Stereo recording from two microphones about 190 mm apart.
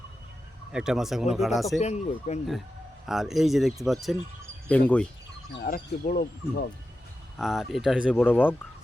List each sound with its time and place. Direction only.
0.7 s speech: 5° right (ahead or behind)
1.8 s speech: 35° left (ahead or behind)
3.1 s speech: centre (ahead or behind)
5.5 s speech: 50° left (ahead or behind)
7.3 s speech: centre (ahead or behind)
8.1 s speech: 10° left (ahead or behind)